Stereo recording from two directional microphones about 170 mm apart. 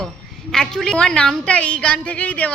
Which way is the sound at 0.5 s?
5° left (ahead or behind).